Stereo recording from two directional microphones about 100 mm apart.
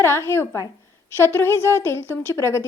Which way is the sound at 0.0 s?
25° left (ahead or behind).